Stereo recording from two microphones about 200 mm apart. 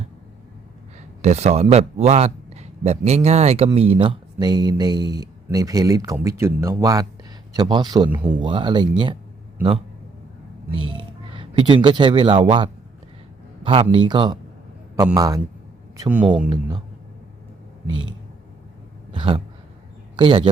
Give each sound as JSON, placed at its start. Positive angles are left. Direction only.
{"t": 1.2, "sound": "a man's voice", "side_deg": -35}
{"t": 10.7, "sound": "a man's voice", "side_deg": -25}
{"t": 13.9, "sound": "a man's voice", "side_deg": -25}
{"t": 16.0, "sound": "speech", "side_deg": -5}
{"t": 16.5, "sound": "a man's voice", "side_deg": -25}
{"t": 19.1, "sound": "a sound", "side_deg": -25}
{"t": 20.1, "sound": "a man's voice", "side_deg": -25}